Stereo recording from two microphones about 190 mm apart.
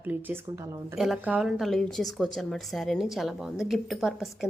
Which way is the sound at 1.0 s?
Centre (ahead or behind).